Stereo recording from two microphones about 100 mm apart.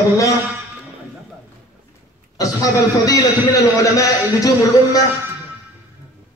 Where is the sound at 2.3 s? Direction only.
35° left (ahead or behind).